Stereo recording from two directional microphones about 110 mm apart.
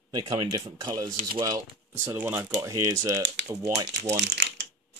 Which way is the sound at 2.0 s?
20° right (ahead or behind).